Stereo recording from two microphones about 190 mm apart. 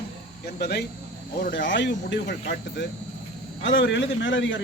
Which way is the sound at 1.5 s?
70° left (ahead or behind).